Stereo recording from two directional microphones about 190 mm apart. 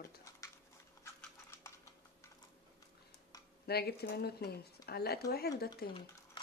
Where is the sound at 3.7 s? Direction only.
55° left (ahead or behind).